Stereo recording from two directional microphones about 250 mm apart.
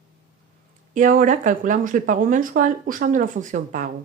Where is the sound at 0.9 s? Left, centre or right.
Right.